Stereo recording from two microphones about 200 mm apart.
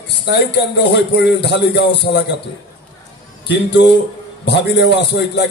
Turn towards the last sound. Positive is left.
turn(degrees=60)  # may be behind; listen again after turning